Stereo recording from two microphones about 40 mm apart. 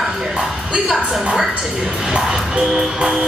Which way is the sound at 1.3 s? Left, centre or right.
Centre.